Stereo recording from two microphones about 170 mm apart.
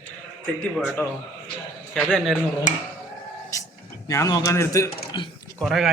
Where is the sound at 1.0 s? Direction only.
15° left (ahead or behind).